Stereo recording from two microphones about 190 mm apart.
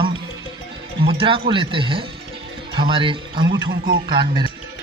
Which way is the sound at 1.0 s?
25° right (ahead or behind).